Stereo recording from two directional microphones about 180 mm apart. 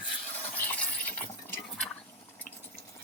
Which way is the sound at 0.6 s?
10° left (ahead or behind).